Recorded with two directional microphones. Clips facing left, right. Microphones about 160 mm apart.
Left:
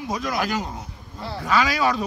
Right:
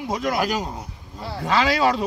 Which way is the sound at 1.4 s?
30° right (ahead or behind).